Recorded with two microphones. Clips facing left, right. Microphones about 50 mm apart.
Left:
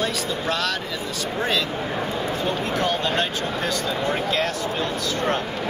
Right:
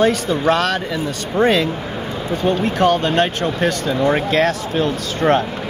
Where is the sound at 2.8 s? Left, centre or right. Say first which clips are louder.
Right 9 dB; right.